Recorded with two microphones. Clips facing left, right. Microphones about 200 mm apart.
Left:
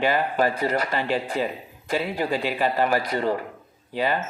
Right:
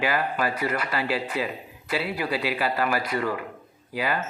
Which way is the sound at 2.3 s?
40° left (ahead or behind).